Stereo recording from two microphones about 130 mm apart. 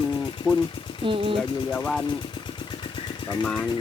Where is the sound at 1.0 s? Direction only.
40° right (ahead or behind).